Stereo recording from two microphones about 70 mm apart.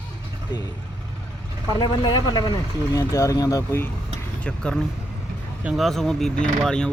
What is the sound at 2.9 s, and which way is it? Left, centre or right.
Speech, left.